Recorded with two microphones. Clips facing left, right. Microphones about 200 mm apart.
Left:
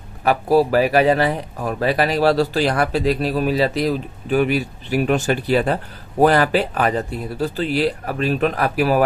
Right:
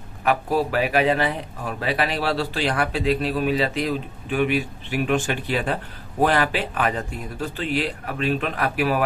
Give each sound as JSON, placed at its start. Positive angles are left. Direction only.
{"t": 0.2, "sound": "speech", "side_deg": 35}